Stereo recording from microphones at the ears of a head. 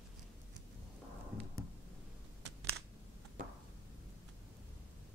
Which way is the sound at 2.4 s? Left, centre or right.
Right.